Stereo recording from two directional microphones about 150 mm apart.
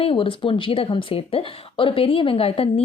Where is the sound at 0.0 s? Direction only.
35° left (ahead or behind).